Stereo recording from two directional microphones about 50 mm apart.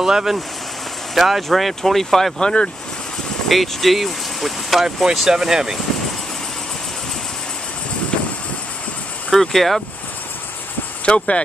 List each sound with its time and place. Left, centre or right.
0.0 s speech: centre
9.3 s speech: centre
11.1 s speech: left